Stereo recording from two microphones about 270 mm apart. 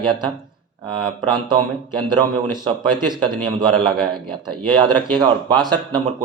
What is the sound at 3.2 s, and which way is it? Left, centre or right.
A man's voice, centre.